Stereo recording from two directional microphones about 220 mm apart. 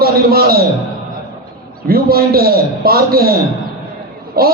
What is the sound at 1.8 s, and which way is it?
A man's voice, 45° right (ahead or behind).